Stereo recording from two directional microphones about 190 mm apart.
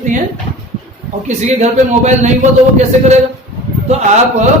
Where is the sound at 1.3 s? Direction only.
35° right (ahead or behind).